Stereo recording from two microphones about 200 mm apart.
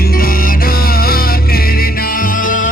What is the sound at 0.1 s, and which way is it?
Music, 45° left (ahead or behind).